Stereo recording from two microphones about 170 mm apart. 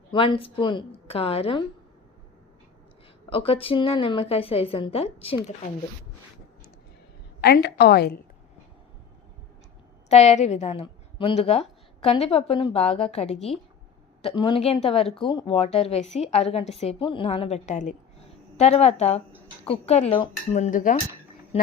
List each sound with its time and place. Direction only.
0.1 s a woman's voice: 30° left (ahead or behind)
3.2 s a woman's voice: 35° left (ahead or behind)
7.4 s a woman's voice: 70° left (ahead or behind)
10.1 s a woman's voice: 40° left (ahead or behind)
20.6 s speech: 50° left (ahead or behind)
21.5 s a woman's voice: 35° left (ahead or behind)